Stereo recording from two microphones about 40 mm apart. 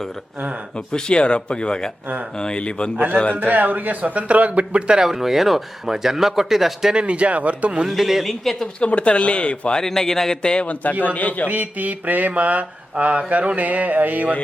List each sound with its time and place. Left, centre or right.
0.9 s speech: left
3.4 s mantra: right
4.1 s a sound: right
5.0 s speech: centre
6.9 s a sound: right
7.9 s a man's voice: centre
8.8 s speech: left
9.8 s speech: centre
11.0 s a man's voice: left
11.4 s mantra: right
13.0 s a sound: right